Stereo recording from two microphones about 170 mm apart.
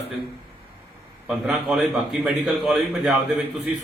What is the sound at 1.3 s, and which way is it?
A man's voice, centre (ahead or behind).